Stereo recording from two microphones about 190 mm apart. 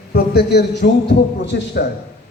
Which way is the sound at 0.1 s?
60° left (ahead or behind).